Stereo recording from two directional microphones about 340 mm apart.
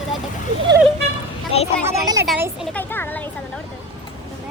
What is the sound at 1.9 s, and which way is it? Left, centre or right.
A child's voice, centre.